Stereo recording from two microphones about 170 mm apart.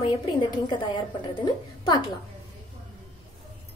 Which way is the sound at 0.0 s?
30° left (ahead or behind).